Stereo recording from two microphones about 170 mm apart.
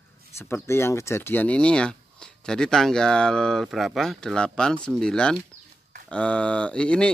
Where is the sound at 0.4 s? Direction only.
15° left (ahead or behind).